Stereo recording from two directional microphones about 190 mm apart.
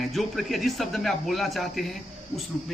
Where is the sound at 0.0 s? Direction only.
Centre (ahead or behind).